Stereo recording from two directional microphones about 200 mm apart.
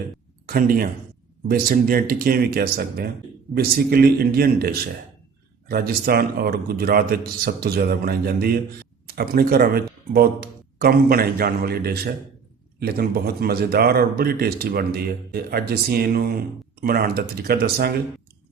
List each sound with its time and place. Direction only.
0.4 s a man's voice: 45° right (ahead or behind)